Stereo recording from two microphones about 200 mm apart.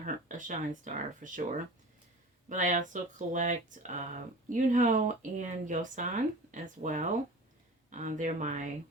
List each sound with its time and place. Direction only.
0.0 s speech: 40° right (ahead or behind)